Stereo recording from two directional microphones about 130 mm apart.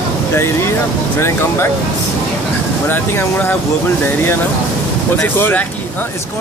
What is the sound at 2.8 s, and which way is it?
Speech, 20° left (ahead or behind).